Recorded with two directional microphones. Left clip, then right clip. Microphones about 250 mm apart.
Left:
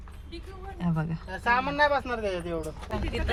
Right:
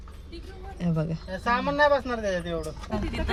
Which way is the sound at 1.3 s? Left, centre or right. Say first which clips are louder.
Left 1 dB; left.